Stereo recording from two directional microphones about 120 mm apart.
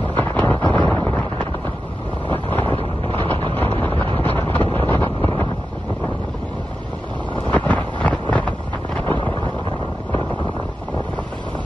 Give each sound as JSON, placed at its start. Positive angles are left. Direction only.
{"t": 0.1, "sound": "wind noise", "side_deg": 15}
{"t": 2.3, "sound": "boat", "side_deg": 15}
{"t": 2.7, "sound": "boat", "side_deg": -45}
{"t": 3.5, "sound": "a sound", "side_deg": 15}
{"t": 4.2, "sound": "wind noise", "side_deg": 15}
{"t": 7.5, "sound": "wind noise", "side_deg": 10}